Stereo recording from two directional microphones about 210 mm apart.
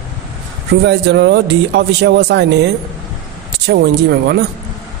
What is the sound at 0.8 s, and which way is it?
Speech, 55° right (ahead or behind).